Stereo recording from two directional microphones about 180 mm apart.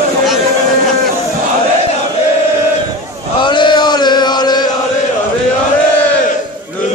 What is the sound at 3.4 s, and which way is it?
Chant, 25° left (ahead or behind).